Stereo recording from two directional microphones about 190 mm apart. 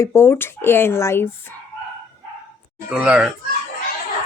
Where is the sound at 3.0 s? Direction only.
5° right (ahead or behind).